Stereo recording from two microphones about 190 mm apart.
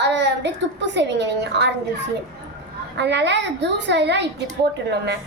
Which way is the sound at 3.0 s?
65° right (ahead or behind).